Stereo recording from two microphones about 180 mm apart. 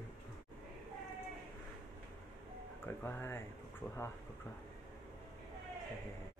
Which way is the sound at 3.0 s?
15° left (ahead or behind).